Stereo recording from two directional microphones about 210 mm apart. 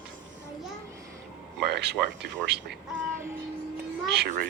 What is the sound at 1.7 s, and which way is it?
Speech, 50° right (ahead or behind).